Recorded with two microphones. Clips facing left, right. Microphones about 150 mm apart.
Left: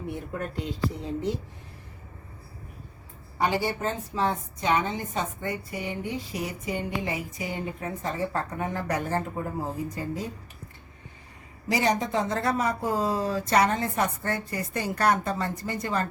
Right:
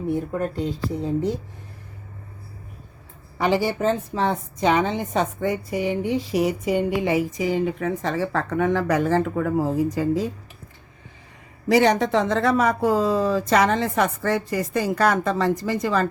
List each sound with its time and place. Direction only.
0.3 s speech: 40° right (ahead or behind)
3.3 s a woman's voice: 90° right
11.7 s a woman's voice: 70° right (ahead or behind); by 16.0 s 90° right